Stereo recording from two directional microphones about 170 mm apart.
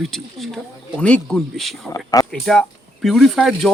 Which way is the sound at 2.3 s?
5° left (ahead or behind).